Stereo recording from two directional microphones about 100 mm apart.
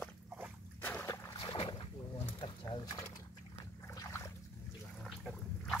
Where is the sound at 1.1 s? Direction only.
30° left (ahead or behind).